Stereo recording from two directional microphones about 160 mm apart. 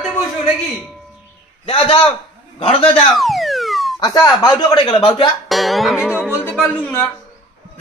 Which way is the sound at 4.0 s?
25° left (ahead or behind).